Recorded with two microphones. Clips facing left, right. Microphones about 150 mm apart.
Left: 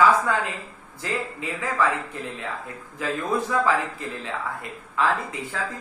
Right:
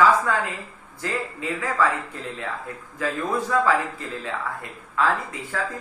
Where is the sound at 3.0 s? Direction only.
20° left (ahead or behind).